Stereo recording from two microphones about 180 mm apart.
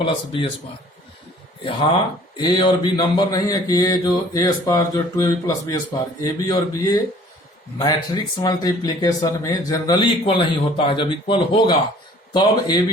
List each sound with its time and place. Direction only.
0.0 s speech: 30° left (ahead or behind)
2.3 s speech: 25° left (ahead or behind)